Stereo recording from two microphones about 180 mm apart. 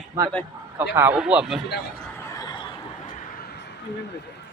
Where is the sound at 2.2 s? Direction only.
15° left (ahead or behind).